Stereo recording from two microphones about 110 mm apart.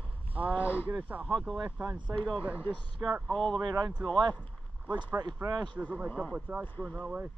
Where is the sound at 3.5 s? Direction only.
40° right (ahead or behind).